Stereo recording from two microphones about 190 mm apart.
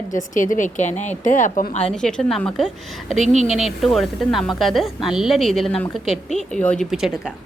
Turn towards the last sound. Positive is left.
turn(degrees=0)  # may be behind; listen again after turning